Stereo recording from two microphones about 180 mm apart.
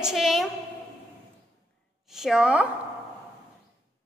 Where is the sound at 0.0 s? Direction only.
Centre (ahead or behind).